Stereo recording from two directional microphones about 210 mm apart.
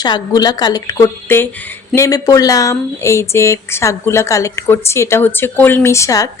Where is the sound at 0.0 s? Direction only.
20° left (ahead or behind).